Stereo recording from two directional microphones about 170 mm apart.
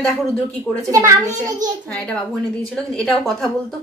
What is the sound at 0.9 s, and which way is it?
Speech, 20° right (ahead or behind).